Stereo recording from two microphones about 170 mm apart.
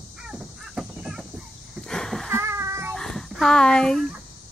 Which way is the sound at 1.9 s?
5° left (ahead or behind).